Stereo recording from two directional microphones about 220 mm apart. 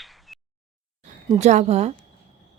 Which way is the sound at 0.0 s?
Centre (ahead or behind).